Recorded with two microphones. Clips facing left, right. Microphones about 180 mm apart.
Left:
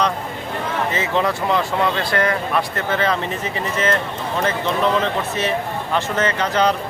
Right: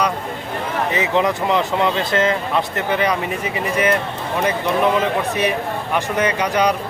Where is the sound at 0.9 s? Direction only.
15° right (ahead or behind).